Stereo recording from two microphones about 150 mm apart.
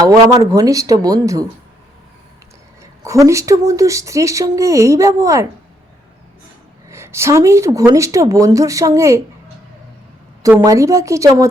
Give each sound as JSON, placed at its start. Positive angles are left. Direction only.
{"t": 0.0, "sound": "speech", "side_deg": -25}
{"t": 3.0, "sound": "speech", "side_deg": -20}
{"t": 6.9, "sound": "speech", "side_deg": -20}
{"t": 10.6, "sound": "speech", "side_deg": -20}